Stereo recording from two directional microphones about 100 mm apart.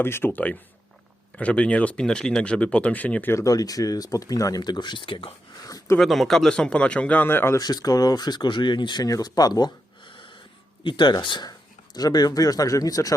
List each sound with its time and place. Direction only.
0.0 s speech: 25° left (ahead or behind)
3.4 s speech: 35° left (ahead or behind); by 5.3 s 60° left (ahead or behind)
5.6 s a sound: 40° left (ahead or behind)
6.0 s speech: centre (ahead or behind); by 7.6 s 25° left (ahead or behind)
7.6 s speech: 40° left (ahead or behind)